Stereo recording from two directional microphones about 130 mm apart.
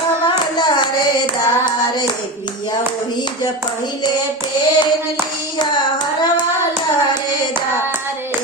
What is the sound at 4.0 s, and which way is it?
Hands, 35° left (ahead or behind).